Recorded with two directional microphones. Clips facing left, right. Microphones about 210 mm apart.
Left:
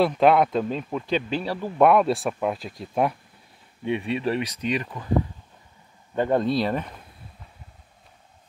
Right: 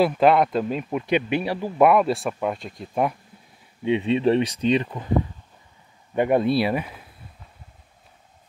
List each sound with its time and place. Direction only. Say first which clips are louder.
0.0 s speech: right 1 dB; centre (ahead or behind)
3.8 s speech: right 5 dB; 20° right (ahead or behind)
6.1 s speech: right 2 dB; 15° right (ahead or behind)